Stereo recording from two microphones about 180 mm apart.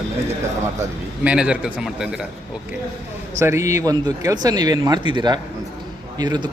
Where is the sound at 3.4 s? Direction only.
15° right (ahead or behind).